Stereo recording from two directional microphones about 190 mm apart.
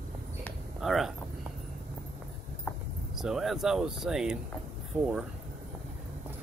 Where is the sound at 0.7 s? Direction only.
Centre (ahead or behind).